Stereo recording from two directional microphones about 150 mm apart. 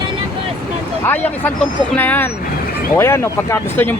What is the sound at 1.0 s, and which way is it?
Speech, 10° left (ahead or behind).